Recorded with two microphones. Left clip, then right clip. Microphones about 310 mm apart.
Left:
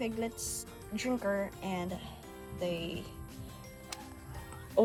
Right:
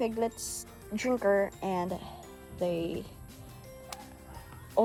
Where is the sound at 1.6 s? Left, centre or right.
Right.